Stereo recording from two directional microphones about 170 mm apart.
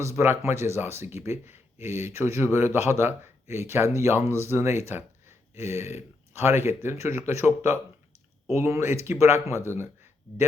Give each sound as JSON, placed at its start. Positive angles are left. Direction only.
{"t": 0.0, "sound": "speech", "side_deg": -15}